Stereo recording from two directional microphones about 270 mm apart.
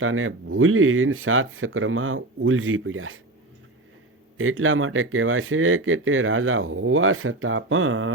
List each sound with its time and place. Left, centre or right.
0.0 s speech: right
4.4 s speech: right